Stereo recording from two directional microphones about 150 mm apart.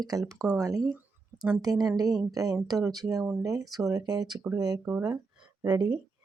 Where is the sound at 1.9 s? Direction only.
25° right (ahead or behind).